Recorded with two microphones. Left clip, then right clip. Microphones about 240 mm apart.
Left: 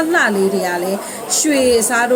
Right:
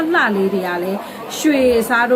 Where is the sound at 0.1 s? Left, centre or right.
Centre.